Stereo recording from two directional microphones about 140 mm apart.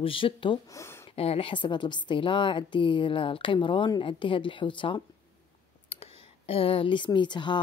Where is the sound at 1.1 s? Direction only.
45° left (ahead or behind).